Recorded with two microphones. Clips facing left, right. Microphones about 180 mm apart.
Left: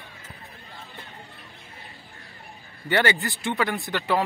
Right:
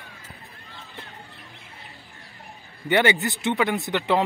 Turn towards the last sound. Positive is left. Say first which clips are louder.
# right 2 dB
turn(degrees=-20)  # may be behind; listen again after turning